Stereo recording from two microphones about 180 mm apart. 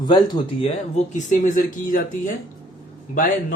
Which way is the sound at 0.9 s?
45° left (ahead or behind).